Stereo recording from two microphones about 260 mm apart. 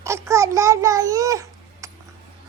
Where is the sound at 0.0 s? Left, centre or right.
Centre.